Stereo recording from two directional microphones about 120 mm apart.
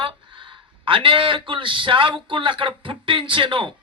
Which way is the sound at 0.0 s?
45° right (ahead or behind).